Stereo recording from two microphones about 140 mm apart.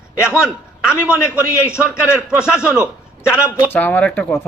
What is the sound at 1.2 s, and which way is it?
Speech, 20° left (ahead or behind).